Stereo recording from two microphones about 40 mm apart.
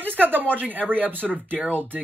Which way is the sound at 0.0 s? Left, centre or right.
Right.